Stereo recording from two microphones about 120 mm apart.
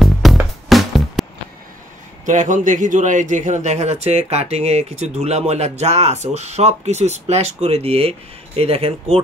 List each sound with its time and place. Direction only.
0.0 s music: centre (ahead or behind)
2.2 s a man's voice: 90° right; by 9.2 s 55° right (ahead or behind)